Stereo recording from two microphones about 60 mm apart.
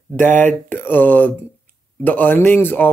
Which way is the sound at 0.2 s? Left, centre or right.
Left.